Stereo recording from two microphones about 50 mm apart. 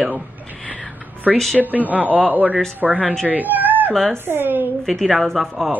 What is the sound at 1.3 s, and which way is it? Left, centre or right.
Speech, centre.